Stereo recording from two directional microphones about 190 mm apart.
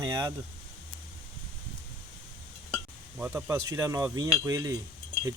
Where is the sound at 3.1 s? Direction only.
10° right (ahead or behind).